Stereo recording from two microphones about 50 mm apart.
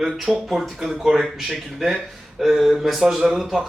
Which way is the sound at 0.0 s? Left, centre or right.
Centre.